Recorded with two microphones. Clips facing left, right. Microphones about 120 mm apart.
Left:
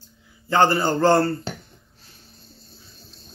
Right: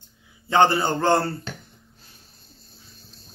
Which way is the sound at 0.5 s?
20° right (ahead or behind).